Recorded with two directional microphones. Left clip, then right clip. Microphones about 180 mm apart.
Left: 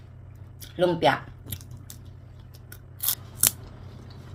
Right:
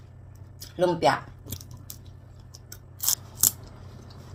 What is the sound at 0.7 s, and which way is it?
Speech, 10° left (ahead or behind).